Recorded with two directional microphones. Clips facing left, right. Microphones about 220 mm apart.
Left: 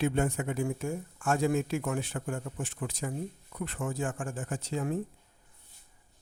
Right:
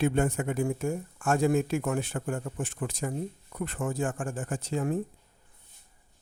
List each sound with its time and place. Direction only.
0.0 s speech: 50° right (ahead or behind)